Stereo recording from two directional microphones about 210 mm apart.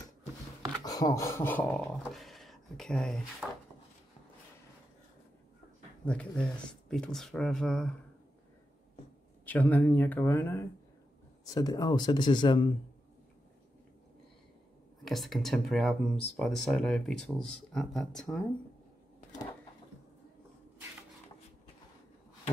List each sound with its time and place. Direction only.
0.8 s speech: 15° left (ahead or behind); by 3.4 s centre (ahead or behind)
6.0 s speech: 5° left (ahead or behind)
9.5 s speech: 10° left (ahead or behind)
15.0 s speech: centre (ahead or behind)